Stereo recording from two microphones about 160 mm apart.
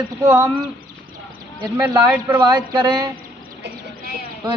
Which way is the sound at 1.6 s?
25° right (ahead or behind).